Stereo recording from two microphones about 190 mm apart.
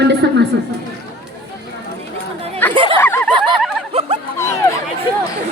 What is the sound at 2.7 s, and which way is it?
Chatter, 25° right (ahead or behind).